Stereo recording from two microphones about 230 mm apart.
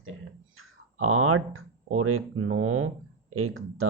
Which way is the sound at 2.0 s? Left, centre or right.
Right.